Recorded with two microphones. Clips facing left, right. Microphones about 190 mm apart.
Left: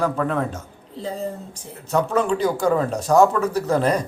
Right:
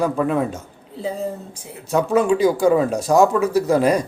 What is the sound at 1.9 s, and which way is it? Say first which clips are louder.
Speech: right 3 dB; 10° right (ahead or behind).